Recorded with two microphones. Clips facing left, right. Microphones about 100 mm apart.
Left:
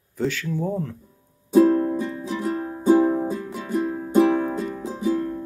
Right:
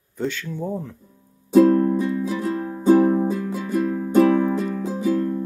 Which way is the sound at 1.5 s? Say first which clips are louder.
Right 2 dB; 20° left (ahead or behind).